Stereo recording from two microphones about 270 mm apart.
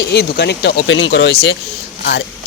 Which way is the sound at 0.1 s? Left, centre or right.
Left.